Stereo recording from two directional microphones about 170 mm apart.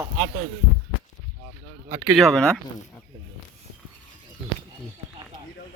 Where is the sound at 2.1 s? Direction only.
Centre (ahead or behind).